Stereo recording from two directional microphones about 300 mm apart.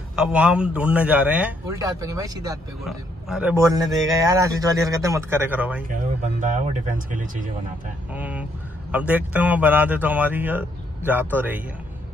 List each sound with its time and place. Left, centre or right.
0.1 s a man's voice: centre
2.8 s a man's voice: centre
5.9 s speech: right
8.1 s a man's voice: centre